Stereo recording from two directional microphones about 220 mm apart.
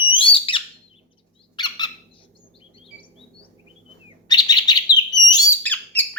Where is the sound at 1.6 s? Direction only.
20° left (ahead or behind).